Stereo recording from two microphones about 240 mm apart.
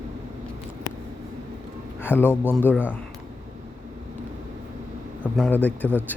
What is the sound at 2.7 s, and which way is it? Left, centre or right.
Speech, centre.